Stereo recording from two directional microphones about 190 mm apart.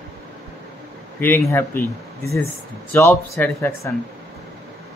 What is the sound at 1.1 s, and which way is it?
Speech, 10° left (ahead or behind).